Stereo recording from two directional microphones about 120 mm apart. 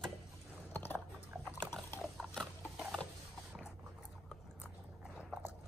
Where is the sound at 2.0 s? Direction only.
Centre (ahead or behind).